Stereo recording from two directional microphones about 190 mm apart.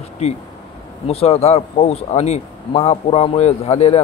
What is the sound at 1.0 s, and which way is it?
Speech, 30° left (ahead or behind).